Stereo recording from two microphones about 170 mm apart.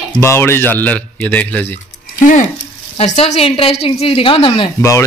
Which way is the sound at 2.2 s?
50° left (ahead or behind).